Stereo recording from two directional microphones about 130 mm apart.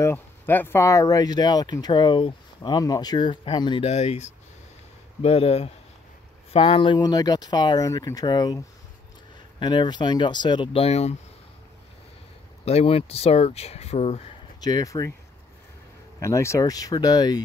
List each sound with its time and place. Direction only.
0.0 s speech: 15° left (ahead or behind); by 3.8 s 35° left (ahead or behind)
3.8 s speech: 55° left (ahead or behind)
12.6 s speech: 50° left (ahead or behind)
14.6 s speech: 30° left (ahead or behind)
16.2 s speech: 20° left (ahead or behind)